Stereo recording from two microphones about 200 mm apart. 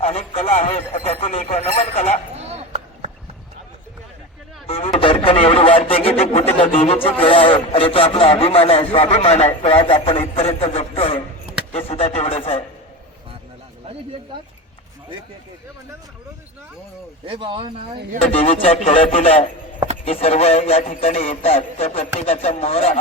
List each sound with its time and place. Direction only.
0.0 s speech: 30° left (ahead or behind)
2.3 s a sound: 30° right (ahead or behind)
4.6 s a sound: 30° left (ahead or behind)
9.6 s a man's voice: 30° left (ahead or behind)
17.2 s speech: 25° right (ahead or behind)
17.9 s speech: 55° right (ahead or behind)
18.3 s a man's voice: 30° left (ahead or behind)